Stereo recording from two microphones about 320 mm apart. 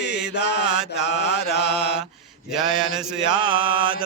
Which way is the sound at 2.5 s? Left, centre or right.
Centre.